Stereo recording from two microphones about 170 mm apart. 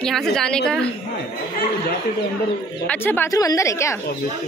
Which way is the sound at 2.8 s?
10° left (ahead or behind).